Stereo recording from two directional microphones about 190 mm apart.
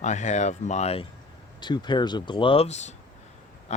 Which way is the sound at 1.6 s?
25° left (ahead or behind).